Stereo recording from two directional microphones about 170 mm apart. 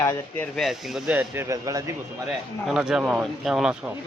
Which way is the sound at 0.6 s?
Centre (ahead or behind).